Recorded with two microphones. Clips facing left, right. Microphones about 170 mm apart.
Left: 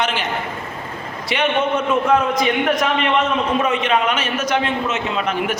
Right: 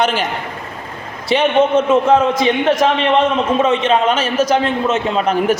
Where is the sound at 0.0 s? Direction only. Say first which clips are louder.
Right 5 dB; 40° right (ahead or behind).